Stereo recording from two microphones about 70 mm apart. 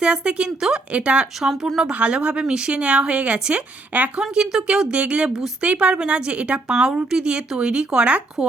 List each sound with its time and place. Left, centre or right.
0.0 s a woman's voice: centre
1.4 s speech: centre
1.9 s a woman's voice: centre